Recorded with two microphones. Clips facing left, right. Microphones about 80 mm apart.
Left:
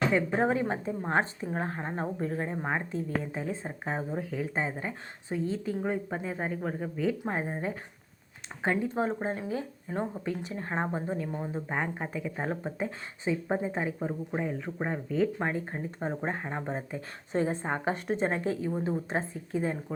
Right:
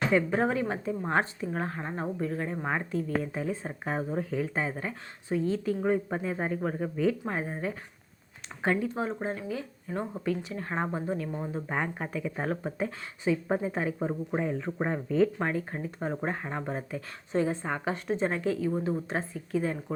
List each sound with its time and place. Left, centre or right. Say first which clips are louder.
0.1 s speech: right 1 dB; centre
4.1 s a man's voice: right 3 dB; centre
4.5 s speech: even; centre
5.8 s a man's voice: right 4 dB; centre
7.3 s speech: even; centre
9.0 s speech: left 2 dB; left; by 11.0 s centre
11.0 s speech: right 1 dB; centre
14.3 s speech: right 3 dB; centre
17.3 s speech: right 1 dB; left
17.9 s a woman's voice: even; left
18.3 s speech: right 1 dB; left